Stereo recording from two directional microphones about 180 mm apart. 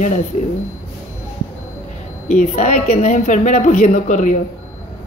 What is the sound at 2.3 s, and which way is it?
A woman's voice, 40° left (ahead or behind).